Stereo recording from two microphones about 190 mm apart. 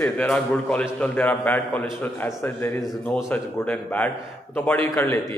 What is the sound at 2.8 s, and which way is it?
Speech, centre (ahead or behind).